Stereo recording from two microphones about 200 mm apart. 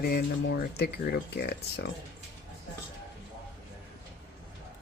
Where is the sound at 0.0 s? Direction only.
55° left (ahead or behind).